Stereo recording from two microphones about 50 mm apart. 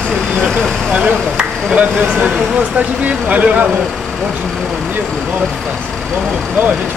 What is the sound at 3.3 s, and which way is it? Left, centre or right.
Speech, right.